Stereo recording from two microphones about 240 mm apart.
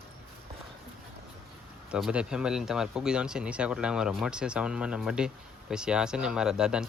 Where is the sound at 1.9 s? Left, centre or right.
Centre.